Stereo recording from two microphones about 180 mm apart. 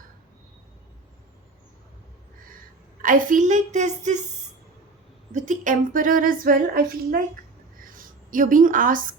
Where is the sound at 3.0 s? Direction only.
50° right (ahead or behind).